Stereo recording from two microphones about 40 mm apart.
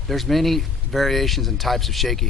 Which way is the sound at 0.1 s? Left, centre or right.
Centre.